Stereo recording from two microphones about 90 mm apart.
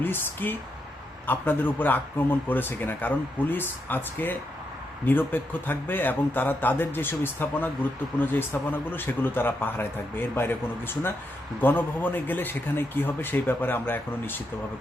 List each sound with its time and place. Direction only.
0.0 s speech: 25° left (ahead or behind)